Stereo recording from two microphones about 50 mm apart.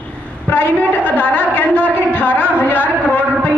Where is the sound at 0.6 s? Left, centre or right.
Left.